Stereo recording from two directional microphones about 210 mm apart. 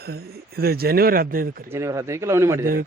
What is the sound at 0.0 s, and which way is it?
Speech, 50° right (ahead or behind).